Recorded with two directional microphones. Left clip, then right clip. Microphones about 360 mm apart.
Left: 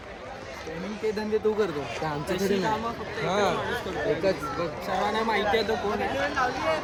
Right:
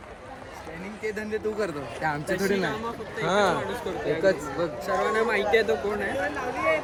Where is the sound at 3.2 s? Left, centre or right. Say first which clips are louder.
Right 2 dB; right.